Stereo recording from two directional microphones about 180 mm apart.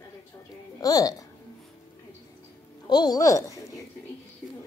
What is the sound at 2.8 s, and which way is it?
Speech, 25° left (ahead or behind).